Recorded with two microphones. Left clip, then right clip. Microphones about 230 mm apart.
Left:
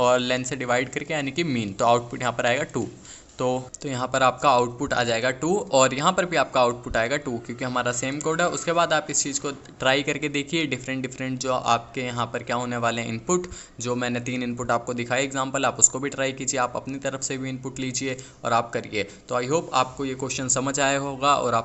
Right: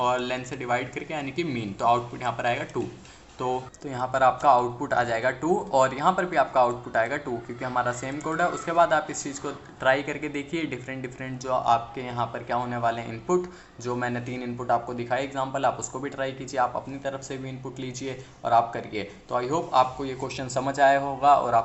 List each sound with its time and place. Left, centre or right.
0.0 s a man's voice: left